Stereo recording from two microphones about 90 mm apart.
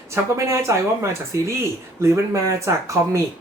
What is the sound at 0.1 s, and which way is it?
Speech, 30° right (ahead or behind).